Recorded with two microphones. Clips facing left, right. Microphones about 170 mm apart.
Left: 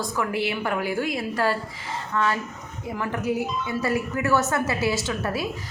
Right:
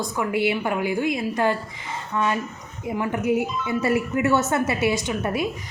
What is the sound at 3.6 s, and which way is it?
A woman's voice, 20° right (ahead or behind).